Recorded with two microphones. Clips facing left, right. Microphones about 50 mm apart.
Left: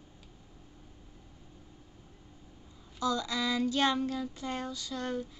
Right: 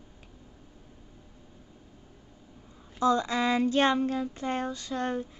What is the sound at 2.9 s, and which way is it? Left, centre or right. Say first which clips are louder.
Child singing: right 6 dB; right.